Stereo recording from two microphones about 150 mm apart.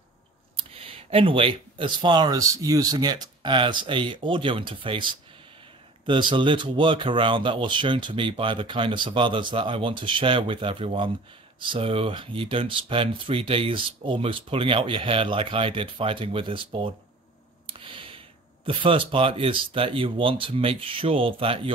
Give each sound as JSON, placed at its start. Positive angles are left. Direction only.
{"t": 0.7, "sound": "speech", "side_deg": -40}
{"t": 6.0, "sound": "speech", "side_deg": -30}
{"t": 17.6, "sound": "a sound", "side_deg": -35}
{"t": 18.7, "sound": "speech", "side_deg": -35}